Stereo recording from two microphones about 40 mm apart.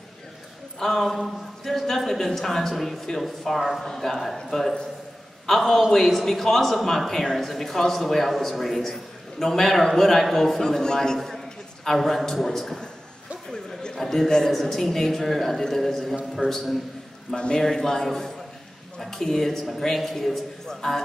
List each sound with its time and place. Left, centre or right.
0.7 s a man's voice: centre
10.6 s a man's voice: centre